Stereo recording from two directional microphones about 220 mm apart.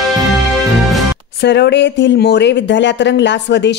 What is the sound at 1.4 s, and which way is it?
Speech, 50° left (ahead or behind).